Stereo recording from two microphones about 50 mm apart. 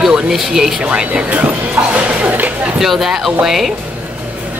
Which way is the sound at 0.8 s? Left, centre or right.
Centre.